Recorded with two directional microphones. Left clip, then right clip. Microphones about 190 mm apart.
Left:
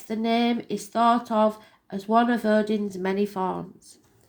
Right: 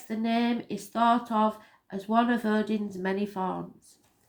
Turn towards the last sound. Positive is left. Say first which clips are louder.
# left 3 dB
turn(degrees=35)  # may be behind; listen again after turning